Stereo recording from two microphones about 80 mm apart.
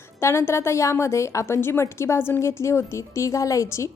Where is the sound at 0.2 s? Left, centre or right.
Left.